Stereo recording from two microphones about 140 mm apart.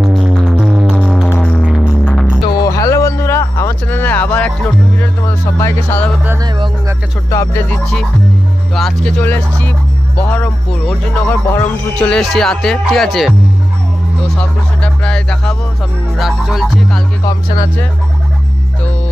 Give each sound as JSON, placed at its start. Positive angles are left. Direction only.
{"t": 0.0, "sound": "music", "side_deg": -5}
{"t": 0.7, "sound": "music", "side_deg": -10}
{"t": 2.6, "sound": "a sound", "side_deg": 20}
{"t": 5.6, "sound": "speech", "side_deg": 15}
{"t": 7.2, "sound": "music", "side_deg": 20}
{"t": 7.7, "sound": "music", "side_deg": 5}
{"t": 9.2, "sound": "speech", "side_deg": 10}
{"t": 14.4, "sound": "speech", "side_deg": 10}
{"t": 16.2, "sound": "music", "side_deg": 0}